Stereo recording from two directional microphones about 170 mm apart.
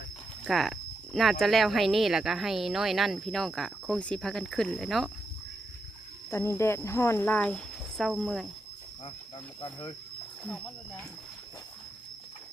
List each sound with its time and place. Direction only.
0.4 s speech: centre (ahead or behind)
6.3 s speech: 15° left (ahead or behind); by 8.4 s centre (ahead or behind)
9.6 s speech: 20° left (ahead or behind)
10.4 s speech: 5° left (ahead or behind)